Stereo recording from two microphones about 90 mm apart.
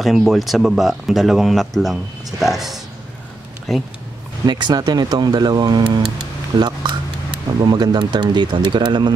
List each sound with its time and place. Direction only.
0.0 s speech: centre (ahead or behind)
4.5 s speech: 55° right (ahead or behind)